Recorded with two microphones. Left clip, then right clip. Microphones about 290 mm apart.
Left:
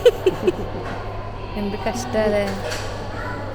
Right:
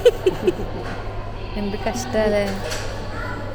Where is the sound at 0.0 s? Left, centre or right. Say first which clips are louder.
Even; centre.